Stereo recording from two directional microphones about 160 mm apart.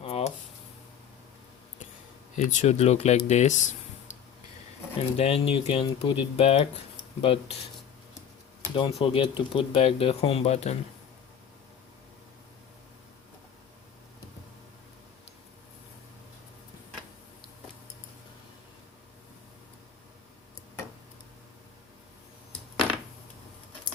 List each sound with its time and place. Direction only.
0.0 s a sound: 40° left (ahead or behind)
2.3 s speech: 50° left (ahead or behind)
5.1 s speech: 40° left (ahead or behind)
8.7 s speech: 35° left (ahead or behind)